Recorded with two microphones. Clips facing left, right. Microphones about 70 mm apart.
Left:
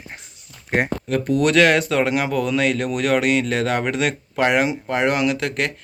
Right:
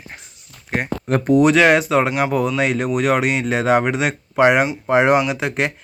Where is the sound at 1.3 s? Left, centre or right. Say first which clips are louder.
Right 3 dB; centre.